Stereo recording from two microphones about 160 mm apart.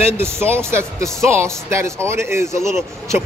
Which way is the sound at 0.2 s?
15° right (ahead or behind).